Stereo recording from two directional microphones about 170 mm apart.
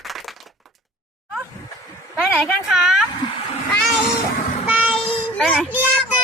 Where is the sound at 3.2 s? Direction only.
25° left (ahead or behind).